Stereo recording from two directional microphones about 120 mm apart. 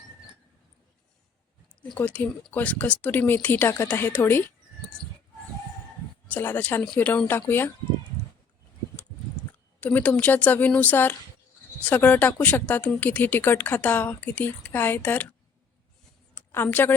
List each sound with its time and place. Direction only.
2.0 s speech: 15° left (ahead or behind)
6.2 s speech: 15° left (ahead or behind)
9.8 s speech: 15° left (ahead or behind)
16.3 s a sound: 20° left (ahead or behind)
16.6 s speech: 15° left (ahead or behind)